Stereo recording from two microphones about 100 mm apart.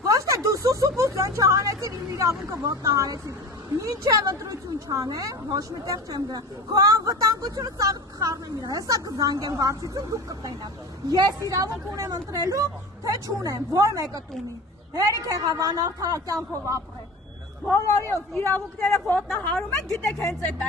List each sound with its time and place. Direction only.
0.0 s a sound: 30° right (ahead or behind)
2.5 s a woman's voice: 35° right (ahead or behind)
17.7 s speech: 25° left (ahead or behind)